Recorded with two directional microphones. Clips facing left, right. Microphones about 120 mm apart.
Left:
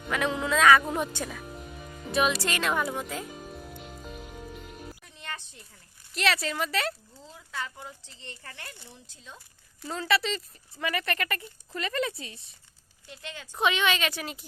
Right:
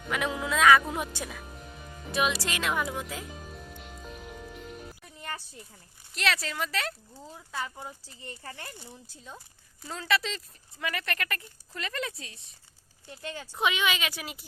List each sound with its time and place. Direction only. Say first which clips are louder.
0.1 s speech: left 3 dB; 10° right (ahead or behind)
6.1 s speech: left 3 dB; centre (ahead or behind)
7.3 s speech: right 1 dB; 25° right (ahead or behind)
9.8 s speech: left 2 dB; centre (ahead or behind)
13.1 s speech: right 4 dB; 20° right (ahead or behind)
13.6 s speech: left 2 dB; 5° right (ahead or behind)